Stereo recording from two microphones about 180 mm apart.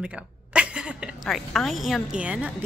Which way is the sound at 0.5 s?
5° right (ahead or behind).